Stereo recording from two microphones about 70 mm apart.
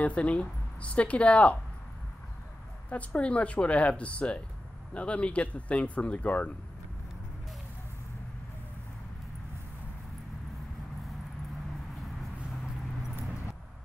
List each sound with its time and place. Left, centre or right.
0.0 s speech: centre
2.9 s speech: centre